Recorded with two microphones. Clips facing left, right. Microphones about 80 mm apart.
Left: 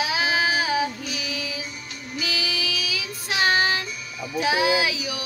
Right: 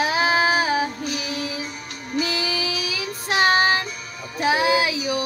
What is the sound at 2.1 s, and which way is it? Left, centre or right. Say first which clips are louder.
Child singing: right 5 dB; right.